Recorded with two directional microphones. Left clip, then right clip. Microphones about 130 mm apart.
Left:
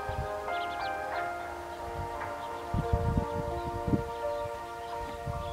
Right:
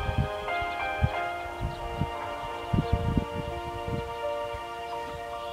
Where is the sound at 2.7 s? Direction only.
35° right (ahead or behind).